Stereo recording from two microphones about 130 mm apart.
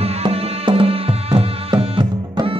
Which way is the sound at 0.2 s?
45° right (ahead or behind).